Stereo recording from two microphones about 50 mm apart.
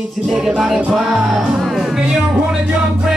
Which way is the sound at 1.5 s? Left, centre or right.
Centre.